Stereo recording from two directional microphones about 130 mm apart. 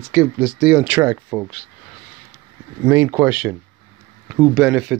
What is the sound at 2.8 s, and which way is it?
Speech, 15° right (ahead or behind).